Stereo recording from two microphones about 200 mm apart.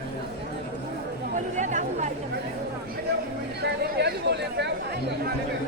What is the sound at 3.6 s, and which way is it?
Chatter, 55° right (ahead or behind).